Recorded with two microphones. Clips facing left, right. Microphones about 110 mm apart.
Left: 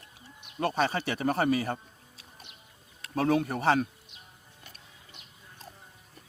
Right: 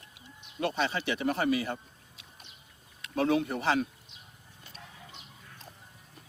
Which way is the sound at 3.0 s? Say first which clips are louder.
Left 1 dB; 40° left (ahead or behind).